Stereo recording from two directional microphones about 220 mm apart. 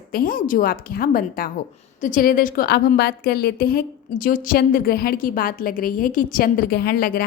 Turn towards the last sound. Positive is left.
turn(degrees=45)  # may be behind; listen again after turning